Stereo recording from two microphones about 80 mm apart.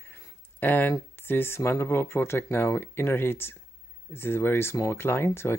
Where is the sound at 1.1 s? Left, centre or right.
Left.